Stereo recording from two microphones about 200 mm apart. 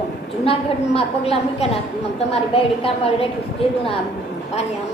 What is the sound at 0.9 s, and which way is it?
A woman's voice, 30° left (ahead or behind).